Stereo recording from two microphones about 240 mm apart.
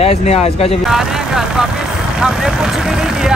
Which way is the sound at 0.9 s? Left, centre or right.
Centre.